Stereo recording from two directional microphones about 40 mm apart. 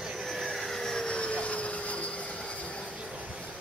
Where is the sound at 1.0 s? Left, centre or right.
Left.